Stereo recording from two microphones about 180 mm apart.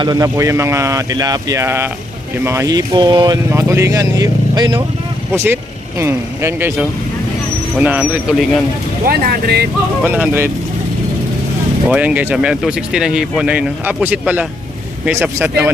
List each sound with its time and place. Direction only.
0.0 s speech: 20° right (ahead or behind); by 8.6 s 5° right (ahead or behind)
9.0 s speech: 60° right (ahead or behind)
10.0 s speech: 10° right (ahead or behind)
11.9 s speech: 10° right (ahead or behind)